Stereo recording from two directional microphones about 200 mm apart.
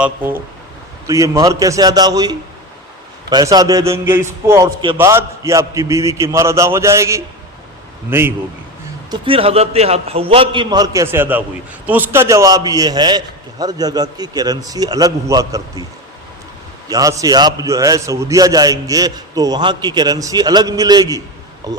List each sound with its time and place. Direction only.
0.0 s a man's voice: 10° right (ahead or behind)
9.0 s a man's voice: 25° right (ahead or behind)
16.9 s a man's voice: 15° right (ahead or behind)